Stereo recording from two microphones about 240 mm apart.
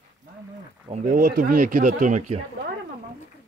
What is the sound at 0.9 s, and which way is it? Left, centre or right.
Speech, right.